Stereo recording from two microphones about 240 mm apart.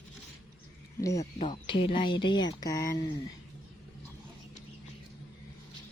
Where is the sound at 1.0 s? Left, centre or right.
Centre.